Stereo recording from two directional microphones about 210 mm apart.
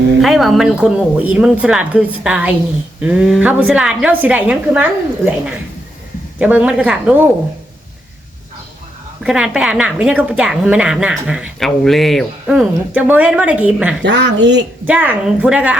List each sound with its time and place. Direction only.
0.2 s a woman's voice: centre (ahead or behind)
9.2 s a woman's voice: 5° right (ahead or behind)
14.0 s speech: 55° right (ahead or behind)
14.8 s speech: 5° right (ahead or behind)